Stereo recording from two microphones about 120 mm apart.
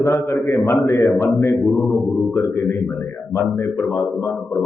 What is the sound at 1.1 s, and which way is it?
Speech, centre (ahead or behind).